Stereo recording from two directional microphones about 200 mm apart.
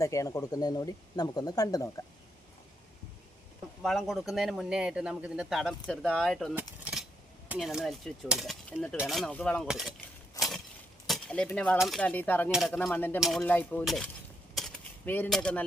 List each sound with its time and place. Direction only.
0.0 s speech: 15° left (ahead or behind)
3.8 s speech: centre (ahead or behind)
6.6 s keys jangling: 5° right (ahead or behind)
7.4 s speech: 5° right (ahead or behind)
10.4 s a sound: 15° left (ahead or behind)
11.0 s speech: centre (ahead or behind)
14.5 s a sound: 5° left (ahead or behind)